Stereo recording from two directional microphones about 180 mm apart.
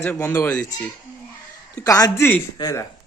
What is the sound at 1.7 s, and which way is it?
Speech, 20° left (ahead or behind).